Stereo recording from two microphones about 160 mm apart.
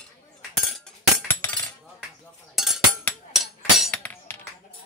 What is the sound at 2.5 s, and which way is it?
Chink, centre (ahead or behind).